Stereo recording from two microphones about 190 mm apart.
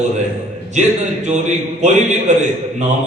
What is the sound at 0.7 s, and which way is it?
A man's voice, 40° right (ahead or behind).